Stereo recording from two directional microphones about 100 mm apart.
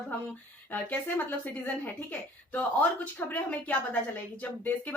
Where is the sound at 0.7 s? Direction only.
20° left (ahead or behind).